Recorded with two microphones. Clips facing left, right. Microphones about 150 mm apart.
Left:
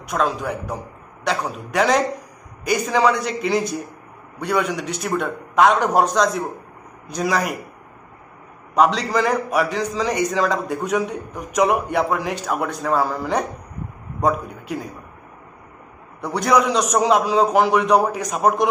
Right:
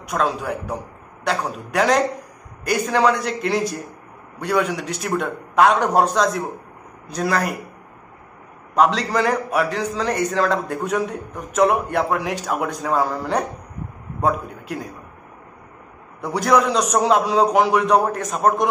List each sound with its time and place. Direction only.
0.1 s a man's voice: centre (ahead or behind)
2.9 s a man's voice: 10° left (ahead or behind)
8.7 s a man's voice: centre (ahead or behind)
14.2 s a man's voice: centre (ahead or behind)
16.2 s a man's voice: 5° right (ahead or behind)